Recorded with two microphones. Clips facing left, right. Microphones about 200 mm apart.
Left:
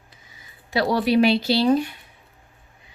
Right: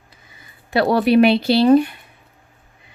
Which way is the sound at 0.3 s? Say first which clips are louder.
Right 5 dB; 55° right (ahead or behind).